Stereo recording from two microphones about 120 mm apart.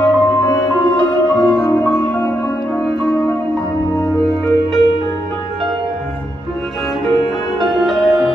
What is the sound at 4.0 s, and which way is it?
Music, 25° left (ahead or behind).